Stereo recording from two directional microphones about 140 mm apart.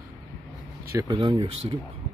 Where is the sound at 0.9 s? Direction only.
25° right (ahead or behind).